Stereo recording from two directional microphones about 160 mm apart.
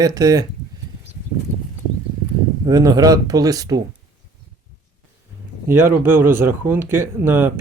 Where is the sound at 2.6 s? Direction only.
20° right (ahead or behind).